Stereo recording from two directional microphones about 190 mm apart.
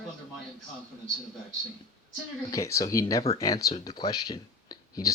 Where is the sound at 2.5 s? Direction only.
15° left (ahead or behind).